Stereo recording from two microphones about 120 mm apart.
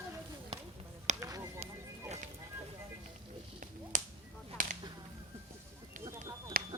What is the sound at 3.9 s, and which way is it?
Whip, 90° right.